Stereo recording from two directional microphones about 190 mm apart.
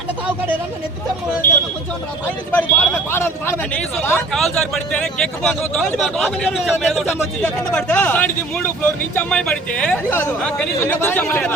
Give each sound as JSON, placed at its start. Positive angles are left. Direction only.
{"t": 2.5, "sound": "a man's voice", "side_deg": 10}